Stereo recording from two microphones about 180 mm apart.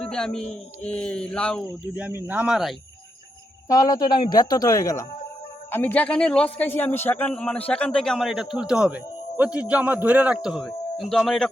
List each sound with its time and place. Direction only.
0.0 s a man's voice: 5° left (ahead or behind)
2.0 s a man's voice: 10° right (ahead or behind)
3.7 s a man's voice: 20° left (ahead or behind); by 11.4 s centre (ahead or behind)